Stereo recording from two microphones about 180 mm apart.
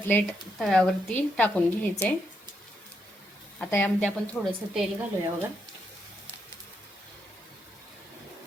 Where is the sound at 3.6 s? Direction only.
10° left (ahead or behind).